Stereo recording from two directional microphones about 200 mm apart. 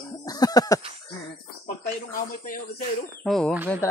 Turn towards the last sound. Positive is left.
turn(degrees=0)  # may be behind; listen again after turning